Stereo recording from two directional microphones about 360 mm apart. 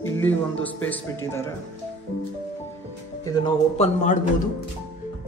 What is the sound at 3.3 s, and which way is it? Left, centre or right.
Speech, centre.